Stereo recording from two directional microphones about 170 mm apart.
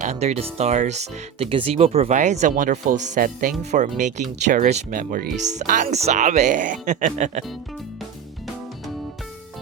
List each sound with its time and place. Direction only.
0.0 s speech: 40° right (ahead or behind)